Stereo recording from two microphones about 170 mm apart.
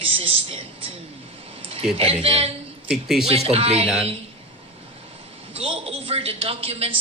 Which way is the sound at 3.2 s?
35° right (ahead or behind).